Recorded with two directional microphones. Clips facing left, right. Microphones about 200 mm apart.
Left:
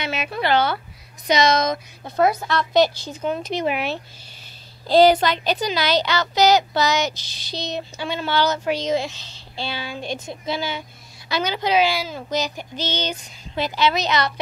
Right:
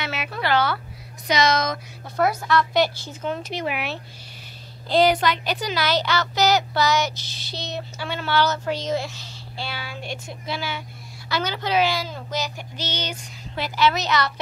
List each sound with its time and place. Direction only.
0.0 s a child's voice: 20° left (ahead or behind)